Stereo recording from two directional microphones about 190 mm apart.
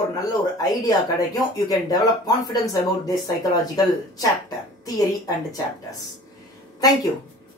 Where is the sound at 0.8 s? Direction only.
20° left (ahead or behind).